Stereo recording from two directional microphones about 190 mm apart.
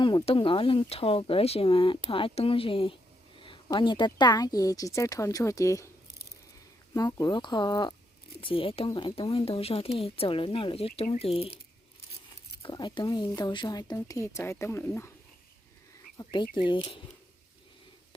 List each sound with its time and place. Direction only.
0.0 s speech: 25° left (ahead or behind)
6.9 s speech: 20° left (ahead or behind)
12.6 s speech: 25° left (ahead or behind)
16.1 s speech: 25° left (ahead or behind)